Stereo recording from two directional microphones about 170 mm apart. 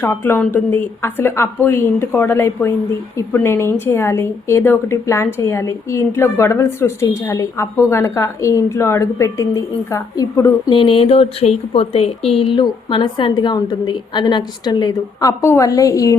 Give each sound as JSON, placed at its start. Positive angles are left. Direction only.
{"t": 0.0, "sound": "a woman's voice", "side_deg": 15}
{"t": 10.7, "sound": "a woman's voice", "side_deg": 30}